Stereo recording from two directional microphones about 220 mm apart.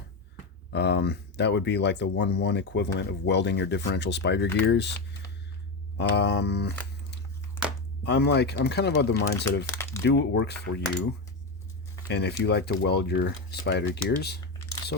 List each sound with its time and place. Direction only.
0.7 s speech: 50° left (ahead or behind)
6.0 s speech: 50° left (ahead or behind)
8.0 s speech: 50° left (ahead or behind)
9.6 s speech: 10° left (ahead or behind)
10.0 s speech: 50° left (ahead or behind)
12.0 s speech: 50° left (ahead or behind)